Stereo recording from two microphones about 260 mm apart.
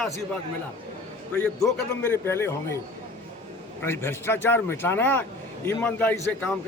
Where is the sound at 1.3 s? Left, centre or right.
Centre.